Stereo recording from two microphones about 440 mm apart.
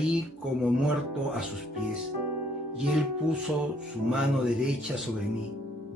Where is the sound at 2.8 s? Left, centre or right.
Centre.